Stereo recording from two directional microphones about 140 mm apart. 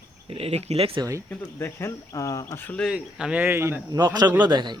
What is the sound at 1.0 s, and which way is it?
Speech, 20° right (ahead or behind).